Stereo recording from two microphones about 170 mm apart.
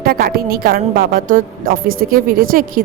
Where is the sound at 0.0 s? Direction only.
60° right (ahead or behind).